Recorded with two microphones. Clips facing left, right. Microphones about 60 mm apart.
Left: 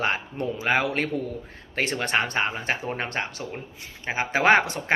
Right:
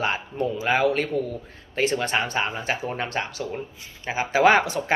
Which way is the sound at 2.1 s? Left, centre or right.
Left.